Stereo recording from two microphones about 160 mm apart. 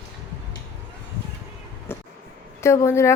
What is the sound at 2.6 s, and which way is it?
Speech, 15° left (ahead or behind).